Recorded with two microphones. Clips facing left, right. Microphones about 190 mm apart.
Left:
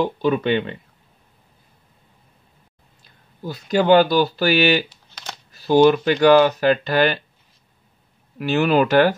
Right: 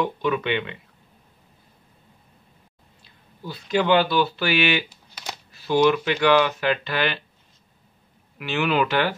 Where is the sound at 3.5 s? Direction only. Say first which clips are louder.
Left 5 dB; 40° left (ahead or behind).